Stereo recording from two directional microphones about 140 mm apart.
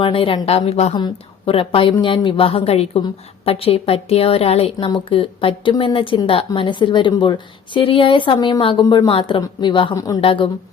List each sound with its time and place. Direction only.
0.0 s a woman's voice: 40° left (ahead or behind)
0.9 s a woman's voice: 35° left (ahead or behind)